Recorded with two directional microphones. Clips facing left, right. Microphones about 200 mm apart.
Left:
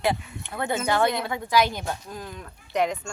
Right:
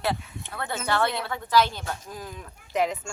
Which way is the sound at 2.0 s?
5° right (ahead or behind).